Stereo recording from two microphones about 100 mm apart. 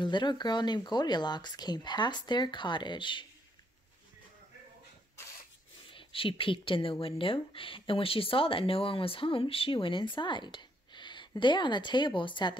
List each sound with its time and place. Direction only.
0.0 s speech: 50° left (ahead or behind)
5.9 s speech: 60° left (ahead or behind)